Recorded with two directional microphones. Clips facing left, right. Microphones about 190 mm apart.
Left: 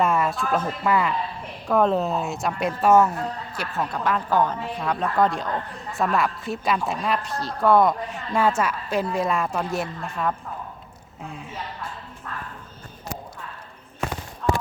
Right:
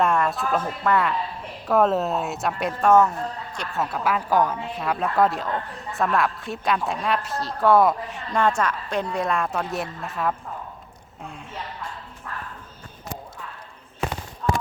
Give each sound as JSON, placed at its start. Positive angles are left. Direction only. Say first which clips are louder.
{"t": 0.0, "sound": "speech", "louder": "even", "side_deg": 0}